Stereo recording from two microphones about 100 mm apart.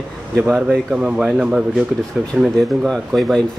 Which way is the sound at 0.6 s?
10° right (ahead or behind).